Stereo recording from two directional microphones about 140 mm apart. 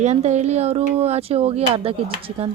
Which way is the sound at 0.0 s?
55° right (ahead or behind).